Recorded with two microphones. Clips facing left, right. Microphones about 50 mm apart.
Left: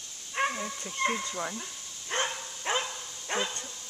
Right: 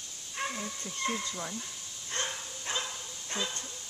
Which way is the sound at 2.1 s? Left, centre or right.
Left.